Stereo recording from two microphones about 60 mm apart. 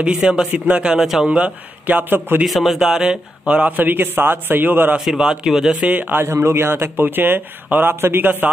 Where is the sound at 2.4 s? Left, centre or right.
Centre; by 5.0 s right.